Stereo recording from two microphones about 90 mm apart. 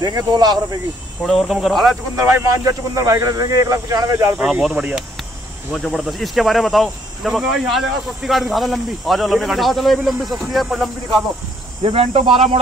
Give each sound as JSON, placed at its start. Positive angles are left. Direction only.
{"t": 0.0, "sound": "speech", "side_deg": -50}
{"t": 1.2, "sound": "speech", "side_deg": 0}
{"t": 2.1, "sound": "speech", "side_deg": -40}
{"t": 4.4, "sound": "speech", "side_deg": -5}
{"t": 11.8, "sound": "speech", "side_deg": -90}